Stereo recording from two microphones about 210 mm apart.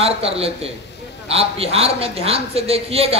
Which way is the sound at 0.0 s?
30° right (ahead or behind).